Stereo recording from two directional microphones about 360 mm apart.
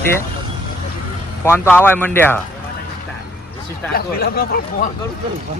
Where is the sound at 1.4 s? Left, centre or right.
Centre.